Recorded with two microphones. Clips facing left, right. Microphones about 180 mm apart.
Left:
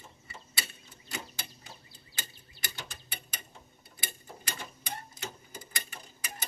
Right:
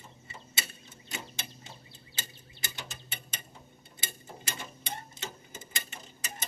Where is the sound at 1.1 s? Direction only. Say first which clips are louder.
Even; 25° right (ahead or behind).